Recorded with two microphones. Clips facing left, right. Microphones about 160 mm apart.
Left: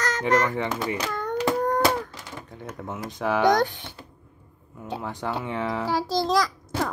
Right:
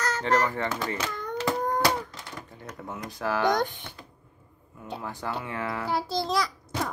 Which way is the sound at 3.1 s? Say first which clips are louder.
Left 4 dB; 20° left (ahead or behind).